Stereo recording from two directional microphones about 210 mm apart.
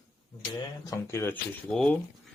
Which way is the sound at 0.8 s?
10° left (ahead or behind).